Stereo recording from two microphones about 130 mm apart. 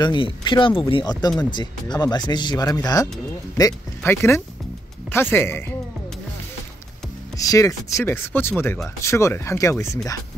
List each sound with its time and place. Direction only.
0.0 s speech: 35° left (ahead or behind); by 5.6 s 15° left (ahead or behind)
7.3 s speech: 25° left (ahead or behind)